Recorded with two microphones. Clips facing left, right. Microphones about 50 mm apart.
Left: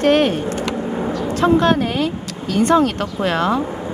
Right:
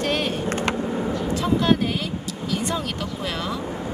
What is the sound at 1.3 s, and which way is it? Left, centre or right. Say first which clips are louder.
Speech: left 6 dB; left.